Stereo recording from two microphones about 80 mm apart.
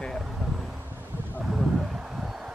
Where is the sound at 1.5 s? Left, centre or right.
Centre.